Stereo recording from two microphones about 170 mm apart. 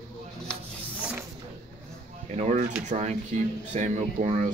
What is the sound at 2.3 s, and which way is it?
Speech, 45° right (ahead or behind).